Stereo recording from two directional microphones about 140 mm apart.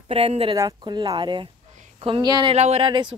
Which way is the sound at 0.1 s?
45° right (ahead or behind).